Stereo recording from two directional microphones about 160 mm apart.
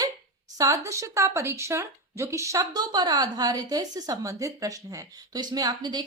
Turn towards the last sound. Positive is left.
turn(degrees=-25)  # may be behind; listen again after turning